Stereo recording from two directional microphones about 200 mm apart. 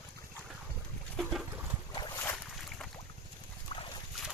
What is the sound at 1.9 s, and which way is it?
Boat, 20° left (ahead or behind).